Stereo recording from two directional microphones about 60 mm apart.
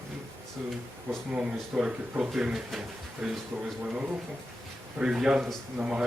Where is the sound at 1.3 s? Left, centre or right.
Centre.